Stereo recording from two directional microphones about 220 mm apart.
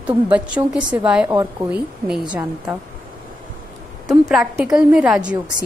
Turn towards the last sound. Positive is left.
turn(degrees=-5)  # may be behind; listen again after turning